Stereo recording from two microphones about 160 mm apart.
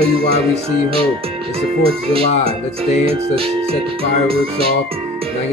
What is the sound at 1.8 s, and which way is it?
Speech, 35° right (ahead or behind).